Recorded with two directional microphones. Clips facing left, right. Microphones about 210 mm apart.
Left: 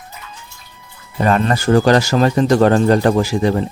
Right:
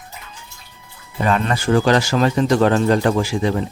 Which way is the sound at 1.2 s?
40° left (ahead or behind).